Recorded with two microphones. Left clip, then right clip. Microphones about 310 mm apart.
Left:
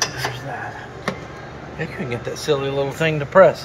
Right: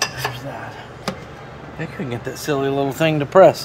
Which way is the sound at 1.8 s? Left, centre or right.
Right.